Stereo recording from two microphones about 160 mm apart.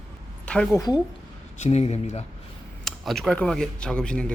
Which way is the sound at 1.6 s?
40° left (ahead or behind).